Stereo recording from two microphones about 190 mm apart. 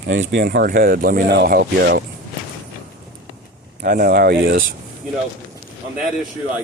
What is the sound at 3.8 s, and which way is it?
Speech, 45° right (ahead or behind).